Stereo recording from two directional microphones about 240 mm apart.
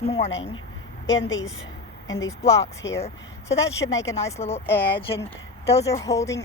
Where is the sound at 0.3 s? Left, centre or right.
Left.